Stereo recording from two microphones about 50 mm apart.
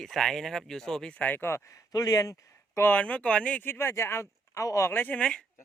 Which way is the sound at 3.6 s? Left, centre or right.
Left.